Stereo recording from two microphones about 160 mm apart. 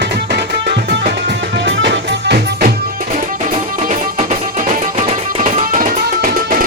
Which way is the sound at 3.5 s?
50° right (ahead or behind).